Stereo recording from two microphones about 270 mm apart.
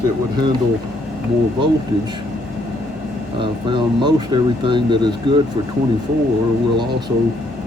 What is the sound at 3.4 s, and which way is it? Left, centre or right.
Speech, centre.